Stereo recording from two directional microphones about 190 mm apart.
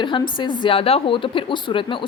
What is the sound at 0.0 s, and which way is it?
A woman's voice, 25° left (ahead or behind).